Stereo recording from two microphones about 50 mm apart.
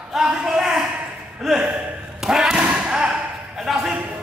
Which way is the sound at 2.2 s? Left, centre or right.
Centre.